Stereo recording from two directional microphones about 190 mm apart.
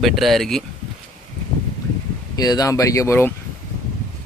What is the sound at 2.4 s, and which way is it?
Speech, 20° left (ahead or behind).